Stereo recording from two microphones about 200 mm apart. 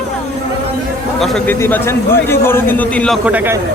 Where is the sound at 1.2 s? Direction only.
Centre (ahead or behind).